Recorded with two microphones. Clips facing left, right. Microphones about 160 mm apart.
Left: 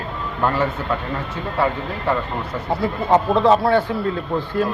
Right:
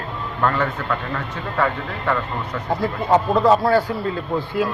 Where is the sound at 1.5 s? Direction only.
25° left (ahead or behind).